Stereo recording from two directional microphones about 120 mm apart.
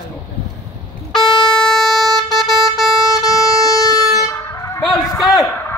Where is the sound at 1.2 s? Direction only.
35° left (ahead or behind).